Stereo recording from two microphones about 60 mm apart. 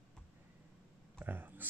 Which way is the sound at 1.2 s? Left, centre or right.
Right.